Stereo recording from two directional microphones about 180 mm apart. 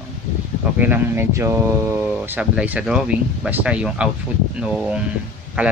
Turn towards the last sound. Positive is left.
turn(degrees=-10)  # may be behind; listen again after turning